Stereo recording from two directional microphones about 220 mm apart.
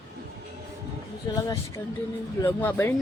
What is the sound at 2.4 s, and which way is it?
Speech, 10° left (ahead or behind).